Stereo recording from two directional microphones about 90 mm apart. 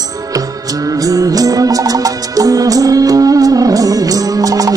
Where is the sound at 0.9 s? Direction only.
40° right (ahead or behind).